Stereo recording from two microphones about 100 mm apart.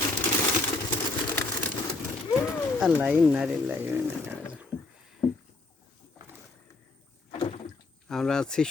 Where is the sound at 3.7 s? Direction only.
25° right (ahead or behind).